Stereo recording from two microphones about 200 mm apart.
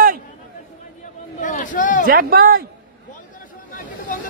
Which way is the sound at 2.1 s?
45° right (ahead or behind).